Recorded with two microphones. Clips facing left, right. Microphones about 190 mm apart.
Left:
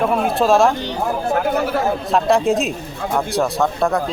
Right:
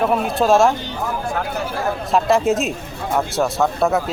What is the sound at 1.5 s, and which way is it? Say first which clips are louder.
Speech: left 6 dB; 60° left (ahead or behind).